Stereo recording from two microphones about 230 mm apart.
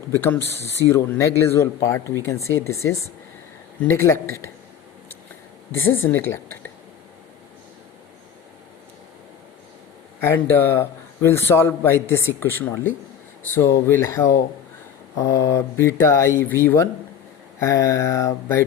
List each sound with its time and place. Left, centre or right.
0.1 s a man's voice: centre
3.9 s a man's voice: centre
5.7 s speech: left
6.0 s a man's voice: centre
10.2 s a man's voice: centre